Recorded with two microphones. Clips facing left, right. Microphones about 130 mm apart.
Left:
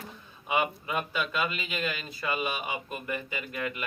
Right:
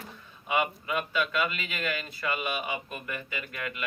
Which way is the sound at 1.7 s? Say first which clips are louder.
Even; 15° left (ahead or behind).